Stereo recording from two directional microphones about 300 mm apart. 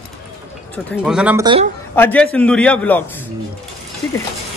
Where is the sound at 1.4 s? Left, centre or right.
Centre.